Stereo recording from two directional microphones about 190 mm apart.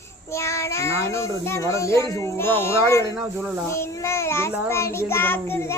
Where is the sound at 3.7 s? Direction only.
15° left (ahead or behind).